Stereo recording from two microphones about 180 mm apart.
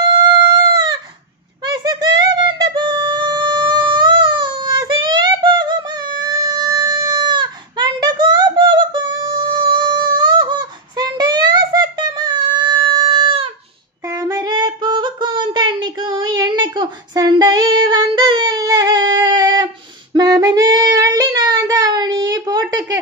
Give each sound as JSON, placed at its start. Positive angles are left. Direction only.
{"t": 0.0, "sound": "howl", "side_deg": -25}
{"t": 1.7, "sound": "music", "side_deg": -20}
{"t": 14.1, "sound": "female singing", "side_deg": -20}
{"t": 20.2, "sound": "child singing", "side_deg": -20}